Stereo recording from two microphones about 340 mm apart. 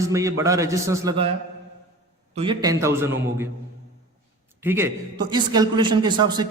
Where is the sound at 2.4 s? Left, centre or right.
Centre.